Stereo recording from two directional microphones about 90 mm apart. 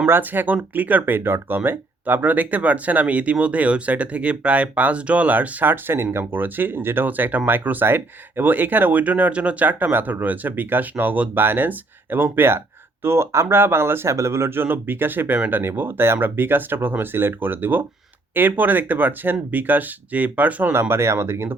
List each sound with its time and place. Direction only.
0.0 s speech: 20° right (ahead or behind)